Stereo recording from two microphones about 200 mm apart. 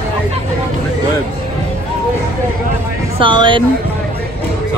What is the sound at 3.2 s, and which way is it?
Speech, 25° right (ahead or behind).